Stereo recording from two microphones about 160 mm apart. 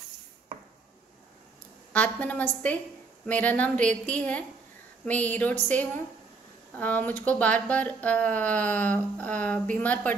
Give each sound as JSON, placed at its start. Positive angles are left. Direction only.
{"t": 1.9, "sound": "speech", "side_deg": 10}